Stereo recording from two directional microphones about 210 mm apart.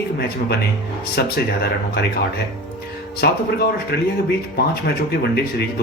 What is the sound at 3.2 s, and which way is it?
Speech, 50° left (ahead or behind).